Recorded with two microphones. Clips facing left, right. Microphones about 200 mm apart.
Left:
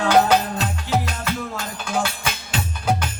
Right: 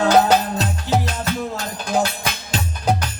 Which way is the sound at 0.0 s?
40° right (ahead or behind).